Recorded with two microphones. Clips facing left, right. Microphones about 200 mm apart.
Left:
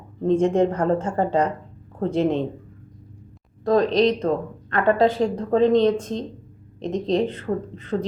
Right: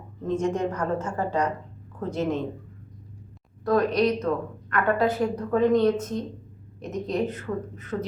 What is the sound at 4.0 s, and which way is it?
Speech, 25° left (ahead or behind).